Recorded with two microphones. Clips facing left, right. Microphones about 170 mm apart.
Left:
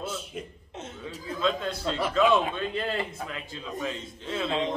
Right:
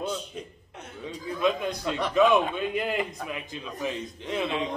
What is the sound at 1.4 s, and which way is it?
A man's voice, 15° right (ahead or behind).